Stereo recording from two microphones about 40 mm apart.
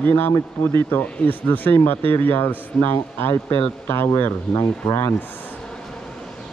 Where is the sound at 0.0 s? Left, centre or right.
Left.